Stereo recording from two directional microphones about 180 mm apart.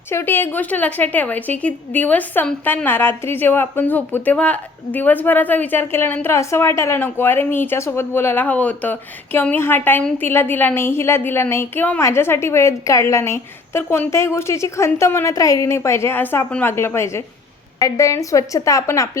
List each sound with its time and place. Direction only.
0.1 s a woman's voice: 15° left (ahead or behind)